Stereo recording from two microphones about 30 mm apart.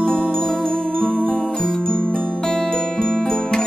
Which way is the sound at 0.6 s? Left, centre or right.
Left.